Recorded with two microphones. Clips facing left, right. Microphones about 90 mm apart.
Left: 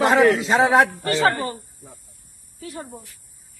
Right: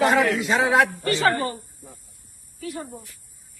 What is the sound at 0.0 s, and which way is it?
Speech, 40° left (ahead or behind).